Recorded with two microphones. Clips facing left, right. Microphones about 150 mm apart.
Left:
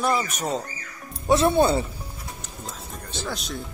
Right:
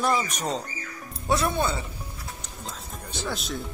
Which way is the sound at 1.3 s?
30° left (ahead or behind).